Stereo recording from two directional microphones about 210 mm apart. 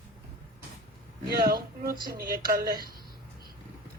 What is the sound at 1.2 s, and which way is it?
Speech, 50° right (ahead or behind).